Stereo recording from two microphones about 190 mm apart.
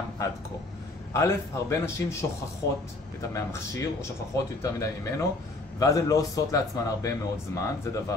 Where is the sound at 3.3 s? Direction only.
15° left (ahead or behind).